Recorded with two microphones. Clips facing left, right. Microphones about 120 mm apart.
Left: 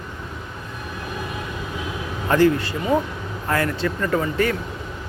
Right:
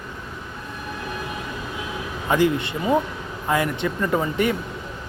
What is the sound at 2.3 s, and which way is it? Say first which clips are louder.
Speech: left 3 dB; 20° right (ahead or behind).